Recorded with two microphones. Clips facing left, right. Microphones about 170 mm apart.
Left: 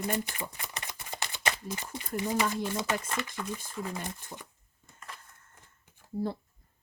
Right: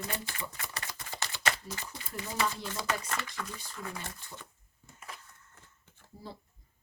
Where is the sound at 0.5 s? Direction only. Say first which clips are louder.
Even; 20° left (ahead or behind).